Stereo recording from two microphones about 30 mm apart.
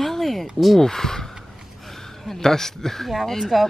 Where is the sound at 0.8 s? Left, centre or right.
Centre.